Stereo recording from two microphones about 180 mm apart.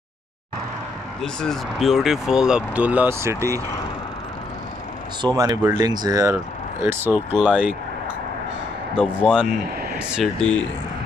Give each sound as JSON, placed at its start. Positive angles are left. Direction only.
{"t": 1.2, "sound": "speech", "side_deg": 5}
{"t": 5.2, "sound": "speech", "side_deg": -20}
{"t": 8.9, "sound": "speech", "side_deg": -5}